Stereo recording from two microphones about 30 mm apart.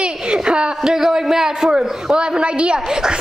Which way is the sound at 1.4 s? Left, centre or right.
Centre.